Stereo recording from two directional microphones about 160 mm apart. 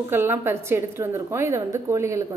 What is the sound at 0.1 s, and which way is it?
A woman's voice, 15° right (ahead or behind).